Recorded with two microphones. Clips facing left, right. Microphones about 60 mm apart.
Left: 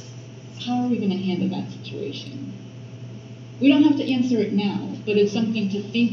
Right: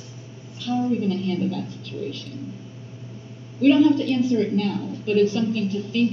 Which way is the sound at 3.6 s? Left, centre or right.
Left.